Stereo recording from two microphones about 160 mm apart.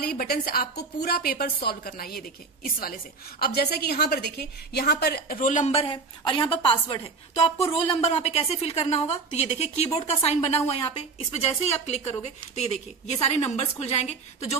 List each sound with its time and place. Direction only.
0.0 s a woman's voice: 70° left (ahead or behind); by 14.6 s 40° left (ahead or behind)